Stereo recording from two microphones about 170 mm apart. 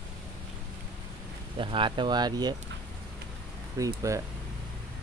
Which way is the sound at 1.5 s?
30° right (ahead or behind).